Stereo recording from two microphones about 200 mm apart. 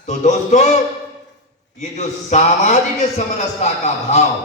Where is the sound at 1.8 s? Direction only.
35° left (ahead or behind).